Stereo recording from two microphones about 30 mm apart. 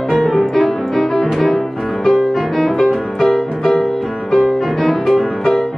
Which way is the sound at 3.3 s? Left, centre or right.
Centre.